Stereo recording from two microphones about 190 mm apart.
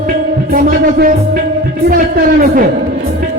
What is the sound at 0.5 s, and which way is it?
Music, 50° right (ahead or behind).